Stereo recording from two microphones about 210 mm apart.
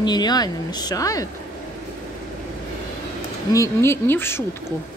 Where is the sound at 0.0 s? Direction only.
20° left (ahead or behind).